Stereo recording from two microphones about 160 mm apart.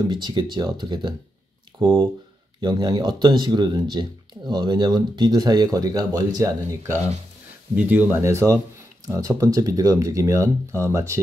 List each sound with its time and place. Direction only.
0.1 s speech: 25° right (ahead or behind)
7.7 s speech: 10° right (ahead or behind)